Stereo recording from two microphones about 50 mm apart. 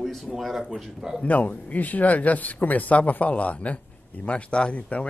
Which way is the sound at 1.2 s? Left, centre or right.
Left.